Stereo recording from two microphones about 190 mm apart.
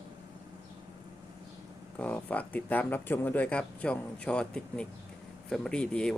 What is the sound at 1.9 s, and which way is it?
Speech, 5° left (ahead or behind).